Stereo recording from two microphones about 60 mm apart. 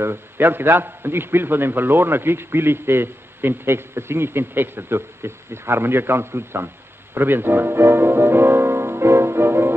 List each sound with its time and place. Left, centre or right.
0.0 s a man's voice: right
7.2 s music: right